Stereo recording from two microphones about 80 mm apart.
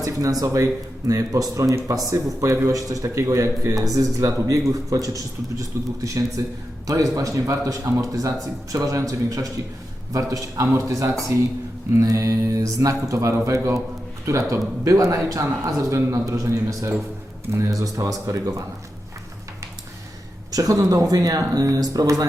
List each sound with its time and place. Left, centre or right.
0.0 s speech: right
20.5 s speech: right